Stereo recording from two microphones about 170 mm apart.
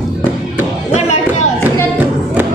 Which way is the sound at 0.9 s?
40° left (ahead or behind).